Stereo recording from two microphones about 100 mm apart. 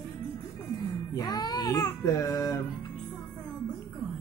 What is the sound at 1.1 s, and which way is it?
Speech, 45° left (ahead or behind).